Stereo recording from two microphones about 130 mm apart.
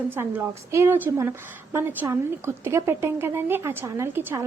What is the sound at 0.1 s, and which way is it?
A woman's voice, 15° right (ahead or behind).